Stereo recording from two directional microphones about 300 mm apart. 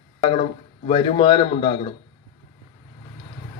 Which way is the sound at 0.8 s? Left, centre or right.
Centre.